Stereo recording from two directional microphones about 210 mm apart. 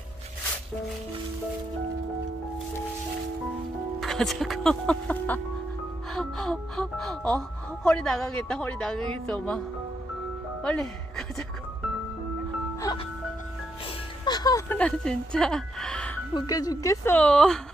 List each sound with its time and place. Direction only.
4.0 s speech: centre (ahead or behind)
10.6 s music: 5° left (ahead or behind)
14.2 s music: 20° left (ahead or behind)
14.8 s speech: 5° left (ahead or behind)
16.3 s a woman's voice: 20° left (ahead or behind)